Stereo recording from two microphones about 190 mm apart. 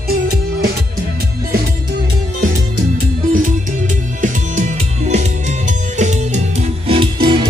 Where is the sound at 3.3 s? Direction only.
45° right (ahead or behind).